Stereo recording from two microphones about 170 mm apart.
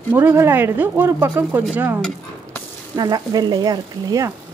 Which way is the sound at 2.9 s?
25° right (ahead or behind).